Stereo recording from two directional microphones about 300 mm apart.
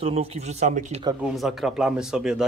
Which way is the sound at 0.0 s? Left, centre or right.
Centre.